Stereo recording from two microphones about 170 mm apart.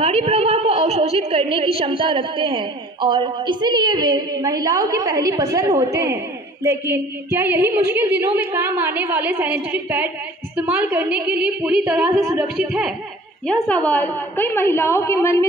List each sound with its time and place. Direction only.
0.0 s a woman's voice: 40° right (ahead or behind); by 12.1 s 5° right (ahead or behind)
12.1 s a woman's voice: 20° right (ahead or behind)
12.4 s speech: 5° right (ahead or behind)
13.8 s a woman's voice: 10° left (ahead or behind)